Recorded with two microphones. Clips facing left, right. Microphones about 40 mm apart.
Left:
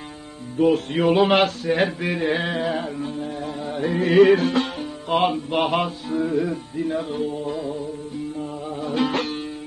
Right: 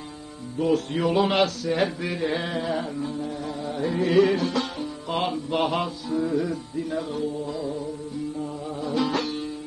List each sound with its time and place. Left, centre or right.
0.6 s music: left
6.1 s music: left
8.8 s music: left